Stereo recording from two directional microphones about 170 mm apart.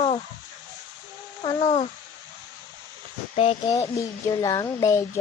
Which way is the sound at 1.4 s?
30° left (ahead or behind).